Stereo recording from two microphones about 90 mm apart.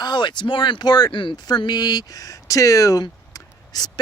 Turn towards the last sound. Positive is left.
turn(degrees=45)  # may be behind; listen again after turning